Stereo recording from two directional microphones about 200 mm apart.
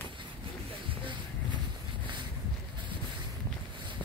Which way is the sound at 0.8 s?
25° right (ahead or behind).